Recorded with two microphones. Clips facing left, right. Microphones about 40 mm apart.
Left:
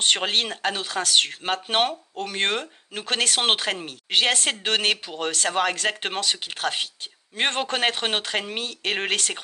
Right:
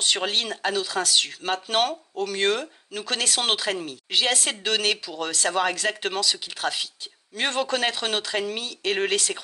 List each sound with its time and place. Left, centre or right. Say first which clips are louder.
0.0 s speech: left 2 dB; left